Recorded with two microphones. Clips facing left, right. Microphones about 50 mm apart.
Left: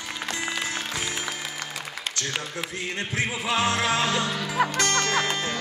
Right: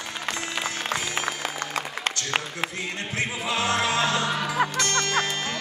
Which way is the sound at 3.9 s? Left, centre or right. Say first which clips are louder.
Right 1 dB; right.